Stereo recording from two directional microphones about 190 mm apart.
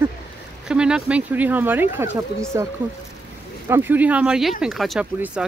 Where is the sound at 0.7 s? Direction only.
5° right (ahead or behind).